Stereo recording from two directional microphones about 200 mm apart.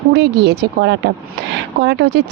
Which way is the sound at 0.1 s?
55° right (ahead or behind).